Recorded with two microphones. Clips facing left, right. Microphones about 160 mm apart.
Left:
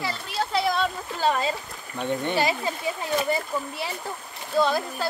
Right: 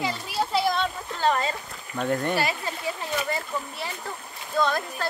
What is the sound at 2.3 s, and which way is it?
Speech, 20° left (ahead or behind).